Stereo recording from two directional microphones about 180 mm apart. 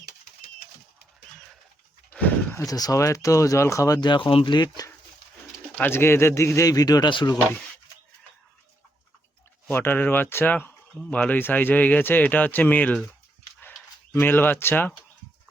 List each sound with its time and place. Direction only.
2.1 s speech: 10° left (ahead or behind); by 7.3 s 25° left (ahead or behind)
9.6 s speech: 10° left (ahead or behind)
14.1 s speech: 10° left (ahead or behind)